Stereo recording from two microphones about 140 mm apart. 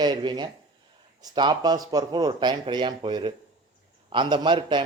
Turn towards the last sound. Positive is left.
turn(degrees=-35)  # may be behind; listen again after turning